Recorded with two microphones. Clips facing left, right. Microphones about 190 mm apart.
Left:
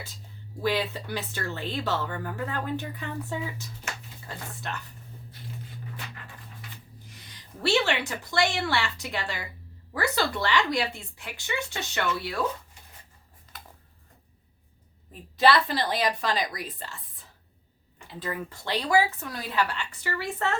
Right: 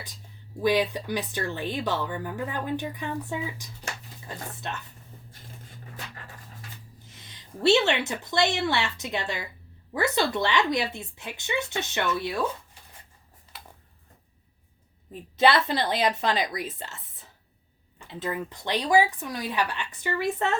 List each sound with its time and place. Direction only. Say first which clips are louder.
0.6 s speech: right 4 dB; 15° right (ahead or behind)
7.1 s a woman's voice: right 4 dB; 25° right (ahead or behind)
15.4 s speech: right 1 dB; 20° right (ahead or behind)
18.1 s speech: right 2 dB; 20° right (ahead or behind)